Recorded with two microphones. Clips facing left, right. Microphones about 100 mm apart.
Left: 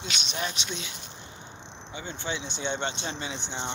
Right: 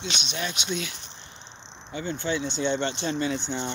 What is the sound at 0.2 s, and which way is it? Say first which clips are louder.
Speech: right 1 dB; 35° left (ahead or behind).